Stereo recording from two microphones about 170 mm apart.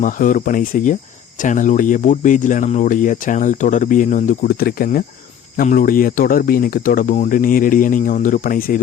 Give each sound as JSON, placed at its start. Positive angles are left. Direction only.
{"t": 0.0, "sound": "speech", "side_deg": 50}